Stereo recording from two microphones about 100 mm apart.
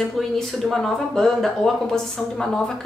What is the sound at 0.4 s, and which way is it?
Speech, 5° left (ahead or behind).